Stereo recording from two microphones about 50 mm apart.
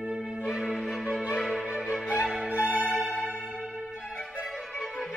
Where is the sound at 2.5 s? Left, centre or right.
Right.